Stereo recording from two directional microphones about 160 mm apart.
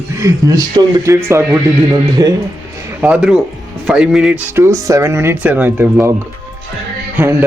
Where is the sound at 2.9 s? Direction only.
10° right (ahead or behind).